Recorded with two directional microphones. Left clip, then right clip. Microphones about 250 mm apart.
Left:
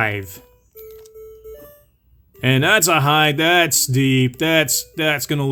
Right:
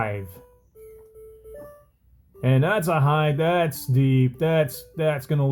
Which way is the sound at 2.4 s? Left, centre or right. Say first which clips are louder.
Left 7 dB; left.